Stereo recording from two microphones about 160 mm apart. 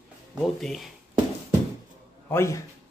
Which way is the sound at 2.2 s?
15° left (ahead or behind).